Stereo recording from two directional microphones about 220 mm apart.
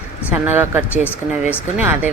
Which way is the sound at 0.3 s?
10° right (ahead or behind).